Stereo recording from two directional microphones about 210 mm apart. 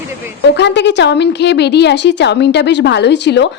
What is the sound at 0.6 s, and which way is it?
A woman's voice, 55° left (ahead or behind).